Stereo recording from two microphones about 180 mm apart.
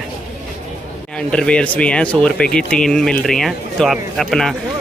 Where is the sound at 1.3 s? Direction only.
5° left (ahead or behind).